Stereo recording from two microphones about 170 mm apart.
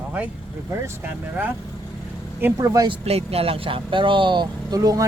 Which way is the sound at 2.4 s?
15° right (ahead or behind).